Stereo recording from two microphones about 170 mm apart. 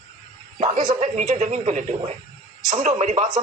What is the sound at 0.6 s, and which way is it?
Speech, 50° right (ahead or behind).